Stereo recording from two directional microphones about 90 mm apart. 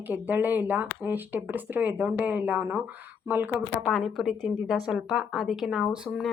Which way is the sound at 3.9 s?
Centre (ahead or behind).